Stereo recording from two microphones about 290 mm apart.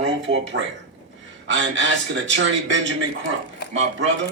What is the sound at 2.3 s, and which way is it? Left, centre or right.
Speech, right.